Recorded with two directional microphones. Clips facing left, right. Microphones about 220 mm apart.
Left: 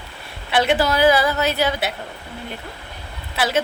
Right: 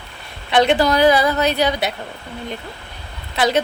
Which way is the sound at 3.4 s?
5° left (ahead or behind).